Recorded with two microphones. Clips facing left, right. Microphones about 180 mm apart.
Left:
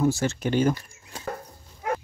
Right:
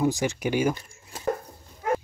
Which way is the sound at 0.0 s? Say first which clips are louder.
Left 1 dB; 15° right (ahead or behind).